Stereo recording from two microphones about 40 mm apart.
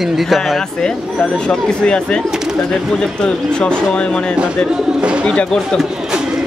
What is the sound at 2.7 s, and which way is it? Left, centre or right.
Speech, centre.